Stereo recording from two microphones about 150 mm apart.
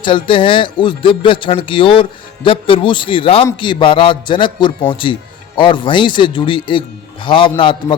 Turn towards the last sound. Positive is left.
turn(degrees=35)  # may be behind; listen again after turning